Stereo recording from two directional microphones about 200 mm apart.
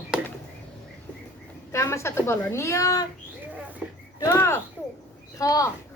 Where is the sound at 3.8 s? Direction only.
10° right (ahead or behind).